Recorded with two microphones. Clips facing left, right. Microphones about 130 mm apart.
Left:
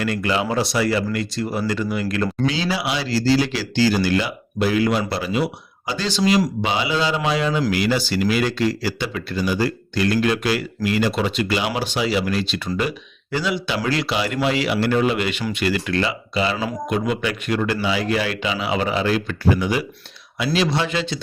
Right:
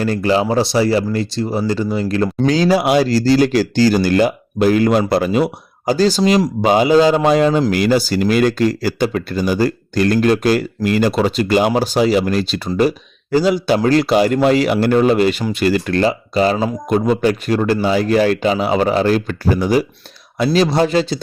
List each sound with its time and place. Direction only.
0.0 s a man's voice: 35° right (ahead or behind)
2.5 s a man's voice: 45° right (ahead or behind)